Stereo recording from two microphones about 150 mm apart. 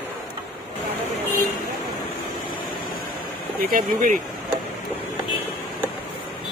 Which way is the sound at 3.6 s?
70° right (ahead or behind).